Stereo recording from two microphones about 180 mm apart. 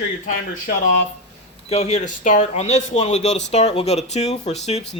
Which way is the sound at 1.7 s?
35° left (ahead or behind).